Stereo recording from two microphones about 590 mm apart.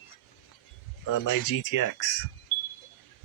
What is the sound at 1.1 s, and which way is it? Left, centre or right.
Speech, left.